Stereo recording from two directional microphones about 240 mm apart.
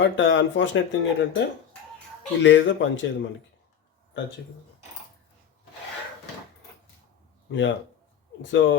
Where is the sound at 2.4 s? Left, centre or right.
Left.